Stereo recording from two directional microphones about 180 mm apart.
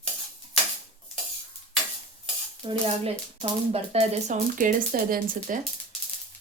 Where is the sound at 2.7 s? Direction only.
30° right (ahead or behind); by 5.6 s 50° right (ahead or behind).